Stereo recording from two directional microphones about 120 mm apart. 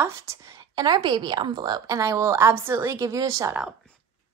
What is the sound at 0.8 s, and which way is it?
A woman's voice, 40° right (ahead or behind).